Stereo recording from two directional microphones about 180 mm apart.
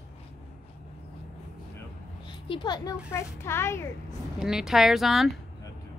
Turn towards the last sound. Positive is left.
turn(degrees=0)  # may be behind; listen again after turning